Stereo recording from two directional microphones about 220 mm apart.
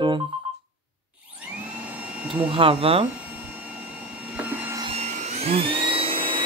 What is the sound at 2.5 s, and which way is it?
Speech, 25° right (ahead or behind).